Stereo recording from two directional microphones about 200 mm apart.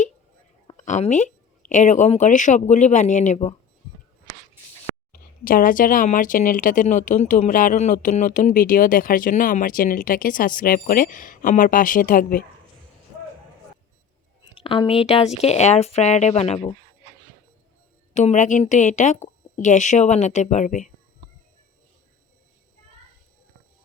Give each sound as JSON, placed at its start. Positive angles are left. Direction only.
{"t": 0.9, "sound": "a woman's voice", "side_deg": 35}
{"t": 5.1, "sound": "speech", "side_deg": 45}
{"t": 14.5, "sound": "a woman's voice", "side_deg": 25}
{"t": 18.1, "sound": "a woman's voice", "side_deg": 35}